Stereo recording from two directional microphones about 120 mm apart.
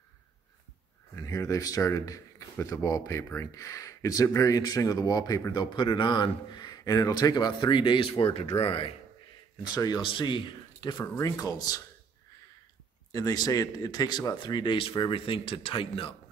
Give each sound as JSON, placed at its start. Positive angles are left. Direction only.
{"t": 1.1, "sound": "speech", "side_deg": 25}
{"t": 9.6, "sound": "speech", "side_deg": 35}
{"t": 13.1, "sound": "speech", "side_deg": 30}